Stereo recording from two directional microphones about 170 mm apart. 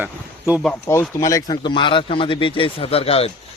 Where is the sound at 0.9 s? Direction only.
15° left (ahead or behind).